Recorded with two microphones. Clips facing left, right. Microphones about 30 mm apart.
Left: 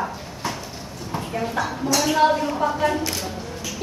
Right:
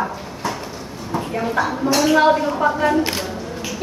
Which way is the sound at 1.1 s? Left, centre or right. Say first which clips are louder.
Right 5 dB; centre.